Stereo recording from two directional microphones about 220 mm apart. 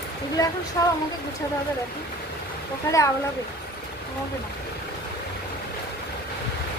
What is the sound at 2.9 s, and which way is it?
Speech, 15° left (ahead or behind).